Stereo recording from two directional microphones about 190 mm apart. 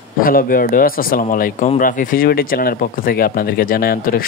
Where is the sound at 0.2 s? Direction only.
50° left (ahead or behind).